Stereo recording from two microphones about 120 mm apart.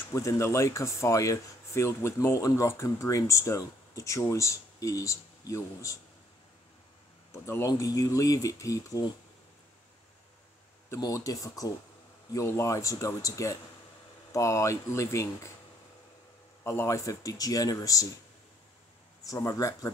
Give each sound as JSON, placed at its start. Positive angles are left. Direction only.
{"t": 0.1, "sound": "speech", "side_deg": 25}
{"t": 7.3, "sound": "speech", "side_deg": 25}
{"t": 11.0, "sound": "speech", "side_deg": 30}
{"t": 16.6, "sound": "speech", "side_deg": 25}
{"t": 19.2, "sound": "speech", "side_deg": 30}